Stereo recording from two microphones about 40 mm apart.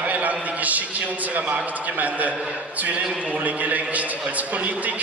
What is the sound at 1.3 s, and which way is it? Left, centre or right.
Speech, right.